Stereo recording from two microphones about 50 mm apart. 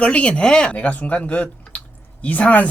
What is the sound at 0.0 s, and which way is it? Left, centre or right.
Speech, left.